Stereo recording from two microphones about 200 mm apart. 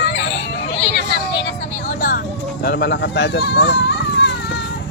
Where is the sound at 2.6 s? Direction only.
55° left (ahead or behind).